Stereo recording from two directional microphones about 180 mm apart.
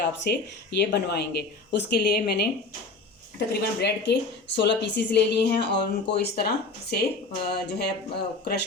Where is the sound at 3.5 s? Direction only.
70° left (ahead or behind).